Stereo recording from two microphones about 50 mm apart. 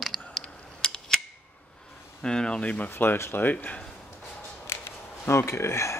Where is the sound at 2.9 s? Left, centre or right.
Left.